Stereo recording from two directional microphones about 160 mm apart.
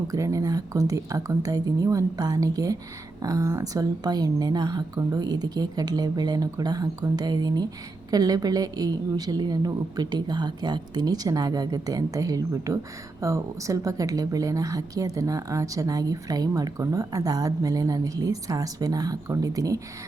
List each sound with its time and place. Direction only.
0.1 s a woman's voice: 20° right (ahead or behind)